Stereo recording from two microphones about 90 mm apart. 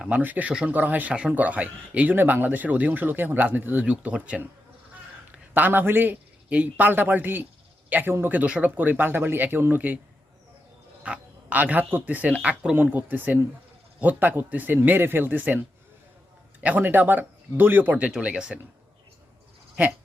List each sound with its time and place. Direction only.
0.2 s a man's voice: 20° right (ahead or behind)
11.0 s a man's voice: 15° right (ahead or behind)
16.6 s a man's voice: 20° right (ahead or behind)
19.8 s speech: 15° right (ahead or behind)